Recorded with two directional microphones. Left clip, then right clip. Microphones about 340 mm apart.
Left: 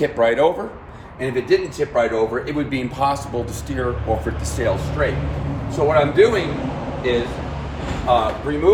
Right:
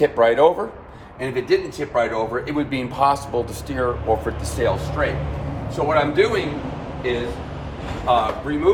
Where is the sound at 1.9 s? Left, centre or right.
Centre.